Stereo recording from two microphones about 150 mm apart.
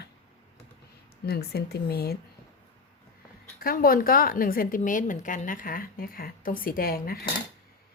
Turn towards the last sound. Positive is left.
turn(degrees=80)